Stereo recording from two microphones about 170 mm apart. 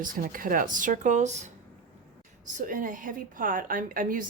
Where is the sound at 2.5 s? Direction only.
50° right (ahead or behind).